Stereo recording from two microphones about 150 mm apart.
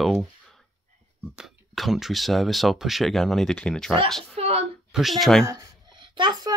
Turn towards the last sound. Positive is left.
turn(degrees=-30)  # may be behind; listen again after turning